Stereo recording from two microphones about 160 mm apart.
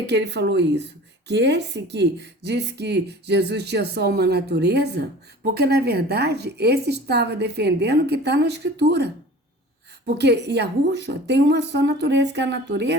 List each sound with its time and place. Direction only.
0.1 s speech: 90° right
10.2 s speech: 90° right